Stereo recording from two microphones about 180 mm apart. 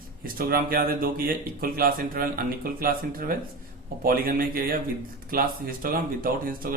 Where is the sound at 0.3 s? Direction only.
55° right (ahead or behind).